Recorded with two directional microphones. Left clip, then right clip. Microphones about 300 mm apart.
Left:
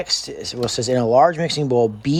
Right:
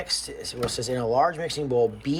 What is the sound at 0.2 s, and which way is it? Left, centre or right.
Speech, left.